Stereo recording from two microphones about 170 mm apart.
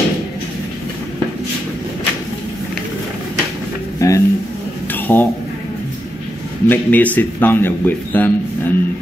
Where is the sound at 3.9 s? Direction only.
20° left (ahead or behind).